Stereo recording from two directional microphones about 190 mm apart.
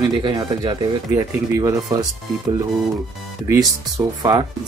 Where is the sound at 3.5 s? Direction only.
20° right (ahead or behind).